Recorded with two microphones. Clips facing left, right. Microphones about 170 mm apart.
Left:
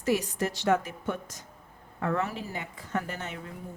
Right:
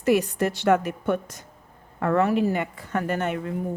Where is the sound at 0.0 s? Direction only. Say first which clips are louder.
Right 6 dB; 60° right (ahead or behind).